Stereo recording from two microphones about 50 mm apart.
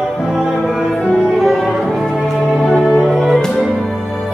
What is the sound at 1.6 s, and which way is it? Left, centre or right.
Music, centre.